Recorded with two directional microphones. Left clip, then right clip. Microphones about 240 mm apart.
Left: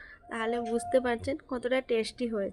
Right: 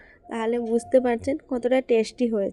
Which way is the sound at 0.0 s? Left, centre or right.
Centre.